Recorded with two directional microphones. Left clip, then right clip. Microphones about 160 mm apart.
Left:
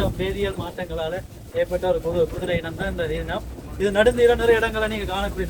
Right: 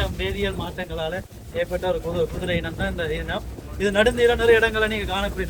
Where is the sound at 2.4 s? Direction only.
20° left (ahead or behind).